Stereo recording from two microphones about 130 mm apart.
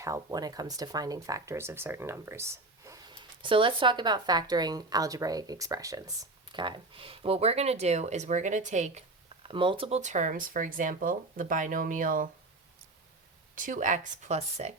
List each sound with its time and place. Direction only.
0.0 s speech: 25° right (ahead or behind)
6.5 s speech: 35° right (ahead or behind); by 9.0 s 65° right (ahead or behind)
9.5 s speech: 40° right (ahead or behind)
10.0 s speech: 70° right (ahead or behind); by 12.3 s 90° right
13.6 s speech: 80° right; by 14.7 s 55° right (ahead or behind)